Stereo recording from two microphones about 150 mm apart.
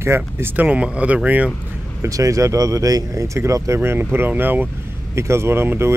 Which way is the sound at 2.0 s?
20° right (ahead or behind).